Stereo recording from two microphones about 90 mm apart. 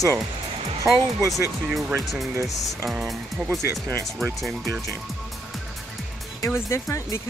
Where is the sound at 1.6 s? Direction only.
5° right (ahead or behind).